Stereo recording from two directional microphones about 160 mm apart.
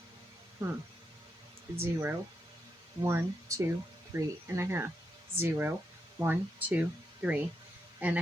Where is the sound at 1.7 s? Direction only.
15° right (ahead or behind).